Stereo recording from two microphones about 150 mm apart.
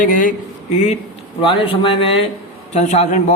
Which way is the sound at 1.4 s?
35° left (ahead or behind).